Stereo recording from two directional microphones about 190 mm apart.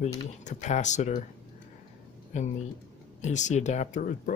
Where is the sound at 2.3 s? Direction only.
40° left (ahead or behind).